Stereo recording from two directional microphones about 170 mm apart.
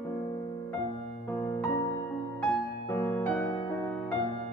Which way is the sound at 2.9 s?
10° left (ahead or behind).